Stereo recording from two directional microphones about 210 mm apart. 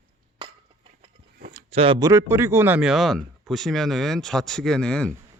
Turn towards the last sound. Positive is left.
turn(degrees=5)  # may be behind; listen again after turning